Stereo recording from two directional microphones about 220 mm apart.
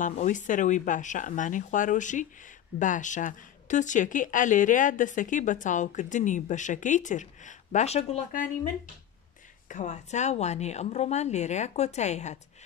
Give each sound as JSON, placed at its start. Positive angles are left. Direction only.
{"t": 0.0, "sound": "speech", "side_deg": 35}
{"t": 9.7, "sound": "speech", "side_deg": 35}